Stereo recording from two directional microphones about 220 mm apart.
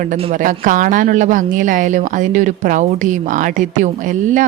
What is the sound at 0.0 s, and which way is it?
A woman's voice, 35° right (ahead or behind).